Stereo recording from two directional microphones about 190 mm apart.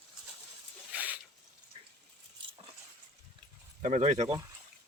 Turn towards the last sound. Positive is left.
turn(degrees=-35)  # may be behind; listen again after turning